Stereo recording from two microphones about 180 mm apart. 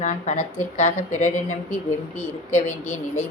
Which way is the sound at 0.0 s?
40° left (ahead or behind).